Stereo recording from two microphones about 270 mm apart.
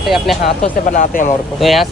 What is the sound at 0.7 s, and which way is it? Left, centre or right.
Speech, left.